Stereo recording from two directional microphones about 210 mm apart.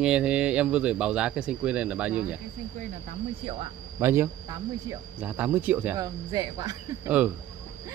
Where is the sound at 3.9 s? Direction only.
10° right (ahead or behind).